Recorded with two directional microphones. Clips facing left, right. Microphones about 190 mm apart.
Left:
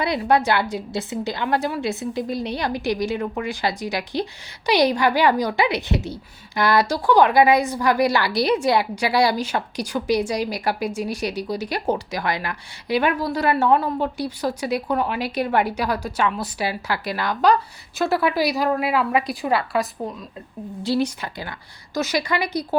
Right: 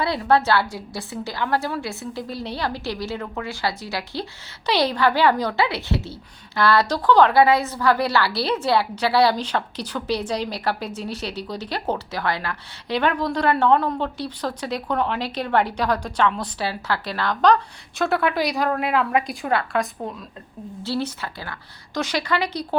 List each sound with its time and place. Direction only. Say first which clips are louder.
0.0 s a woman's voice: even; 15° left (ahead or behind)